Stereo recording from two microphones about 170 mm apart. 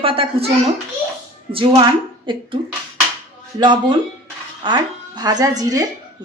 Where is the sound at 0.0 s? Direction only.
30° right (ahead or behind).